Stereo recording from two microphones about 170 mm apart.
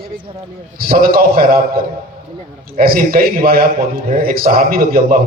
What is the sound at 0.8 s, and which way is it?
A man's voice, 60° right (ahead or behind).